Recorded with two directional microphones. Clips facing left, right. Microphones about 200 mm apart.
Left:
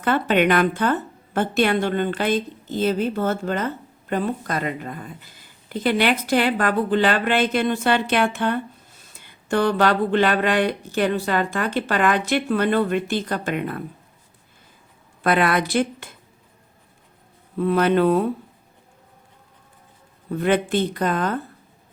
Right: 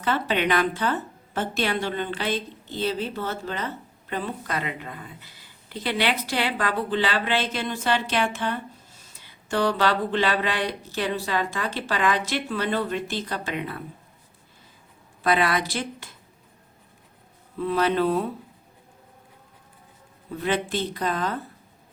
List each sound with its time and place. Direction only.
0.0 s speech: 55° left (ahead or behind)
15.2 s speech: 55° left (ahead or behind)
17.6 s speech: 55° left (ahead or behind)
20.3 s speech: 55° left (ahead or behind)